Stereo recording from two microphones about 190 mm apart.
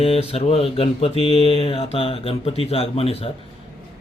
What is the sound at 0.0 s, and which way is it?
Speech, 30° left (ahead or behind).